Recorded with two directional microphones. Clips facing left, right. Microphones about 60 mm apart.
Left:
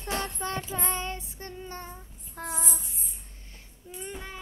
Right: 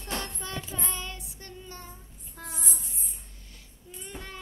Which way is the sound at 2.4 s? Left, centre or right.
Left.